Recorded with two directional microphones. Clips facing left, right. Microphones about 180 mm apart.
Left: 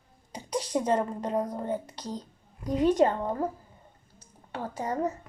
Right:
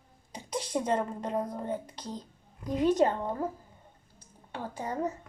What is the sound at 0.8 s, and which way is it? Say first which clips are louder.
Speech: left 3 dB; 35° left (ahead or behind).